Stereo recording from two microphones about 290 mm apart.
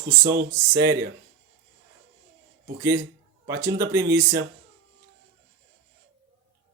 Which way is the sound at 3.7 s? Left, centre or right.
Centre.